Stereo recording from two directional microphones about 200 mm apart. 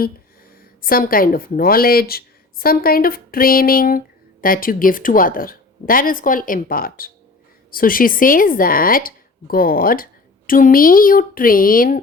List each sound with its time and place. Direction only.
0.8 s a woman's voice: 45° left (ahead or behind)